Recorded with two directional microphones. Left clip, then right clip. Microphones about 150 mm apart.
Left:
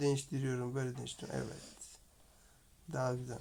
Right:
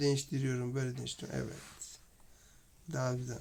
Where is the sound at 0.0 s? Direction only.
20° right (ahead or behind).